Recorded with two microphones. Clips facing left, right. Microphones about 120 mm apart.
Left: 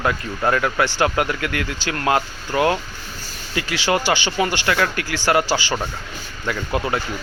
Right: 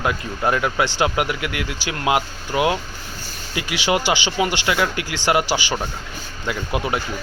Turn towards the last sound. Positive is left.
turn(degrees=-15)  # may be behind; listen again after turning